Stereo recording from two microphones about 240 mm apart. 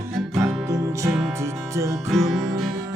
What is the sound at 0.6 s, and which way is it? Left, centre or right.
Music, centre.